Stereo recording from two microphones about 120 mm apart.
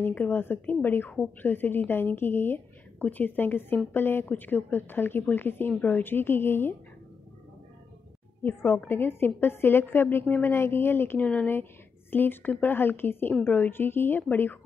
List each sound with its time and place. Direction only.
0.0 s a woman's voice: 15° left (ahead or behind)
8.5 s a woman's voice: 20° left (ahead or behind)